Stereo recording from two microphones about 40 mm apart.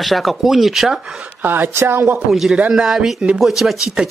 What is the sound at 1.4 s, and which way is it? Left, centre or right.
Speech, right.